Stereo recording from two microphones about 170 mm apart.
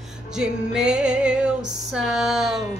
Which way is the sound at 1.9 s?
5° right (ahead or behind).